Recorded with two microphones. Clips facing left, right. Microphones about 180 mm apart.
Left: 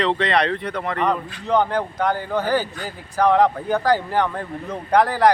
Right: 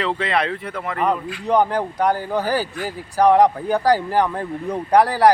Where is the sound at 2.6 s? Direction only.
10° right (ahead or behind).